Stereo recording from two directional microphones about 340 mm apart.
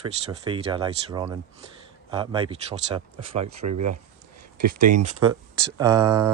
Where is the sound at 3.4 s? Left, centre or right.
Right.